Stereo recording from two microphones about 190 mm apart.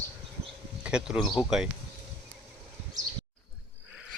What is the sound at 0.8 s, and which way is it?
Speech, 5° right (ahead or behind).